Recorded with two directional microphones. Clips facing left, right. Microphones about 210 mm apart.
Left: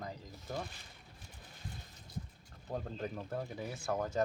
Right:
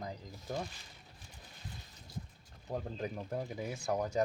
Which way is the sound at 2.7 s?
10° right (ahead or behind).